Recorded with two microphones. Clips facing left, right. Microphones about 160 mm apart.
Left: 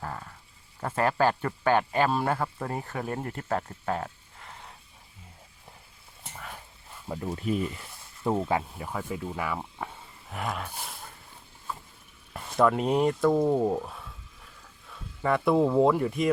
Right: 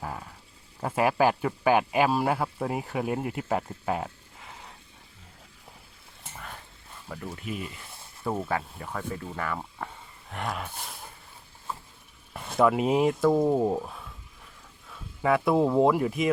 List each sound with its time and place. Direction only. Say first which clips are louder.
0.0 s a sound: right 1 dB; 10° right (ahead or behind)
0.8 s speech: right 2 dB; 10° right (ahead or behind)
6.3 s dog: even; centre (ahead or behind)
7.3 s speech: left 7 dB; 40° left (ahead or behind)
8.4 s speech: left 2 dB; 15° left (ahead or behind); by 10.9 s centre (ahead or behind)
12.3 s speech: right 1 dB; 5° right (ahead or behind)